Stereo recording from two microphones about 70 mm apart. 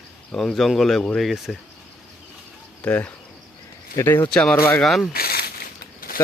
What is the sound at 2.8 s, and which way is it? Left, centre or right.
Speech, left.